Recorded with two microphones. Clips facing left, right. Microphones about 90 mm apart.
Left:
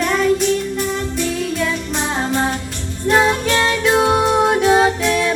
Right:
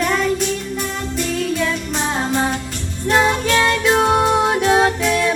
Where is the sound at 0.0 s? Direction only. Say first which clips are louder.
Left 2 dB; centre (ahead or behind).